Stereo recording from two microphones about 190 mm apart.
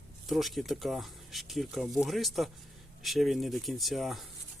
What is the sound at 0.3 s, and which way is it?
Speech, centre (ahead or behind).